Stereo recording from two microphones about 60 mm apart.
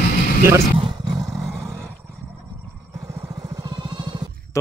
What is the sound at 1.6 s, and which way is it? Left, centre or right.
Roar, right.